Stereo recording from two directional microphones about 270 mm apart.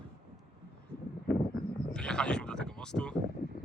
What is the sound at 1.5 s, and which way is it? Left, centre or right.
Speech, centre.